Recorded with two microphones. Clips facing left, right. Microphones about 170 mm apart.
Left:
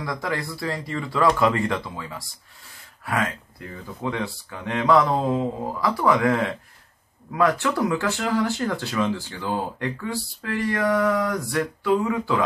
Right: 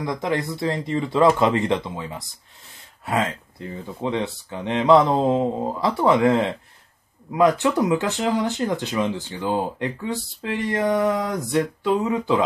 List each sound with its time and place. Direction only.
0.0 s speech: 20° right (ahead or behind)